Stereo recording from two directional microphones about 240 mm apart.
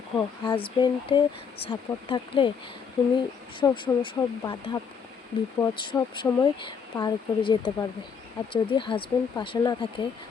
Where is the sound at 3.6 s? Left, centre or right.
Centre.